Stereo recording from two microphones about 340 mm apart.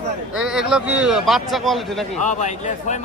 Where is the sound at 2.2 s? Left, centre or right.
Left.